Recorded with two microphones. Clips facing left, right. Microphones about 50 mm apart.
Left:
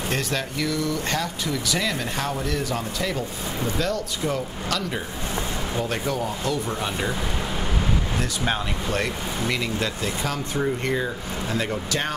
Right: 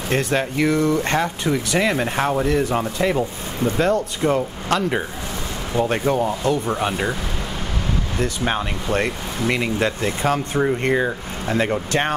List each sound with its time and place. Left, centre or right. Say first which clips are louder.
0.1 s speech: right 9 dB; right
8.2 s speech: right 4 dB; centre